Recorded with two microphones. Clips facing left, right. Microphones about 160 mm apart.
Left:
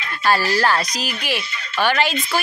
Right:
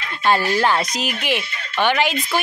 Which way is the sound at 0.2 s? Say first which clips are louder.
Right 1 dB; 20° right (ahead or behind).